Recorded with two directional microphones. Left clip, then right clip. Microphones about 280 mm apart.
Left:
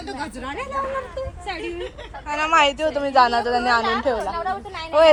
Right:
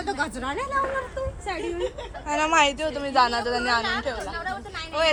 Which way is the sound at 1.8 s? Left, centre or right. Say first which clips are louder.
Right 2 dB; right.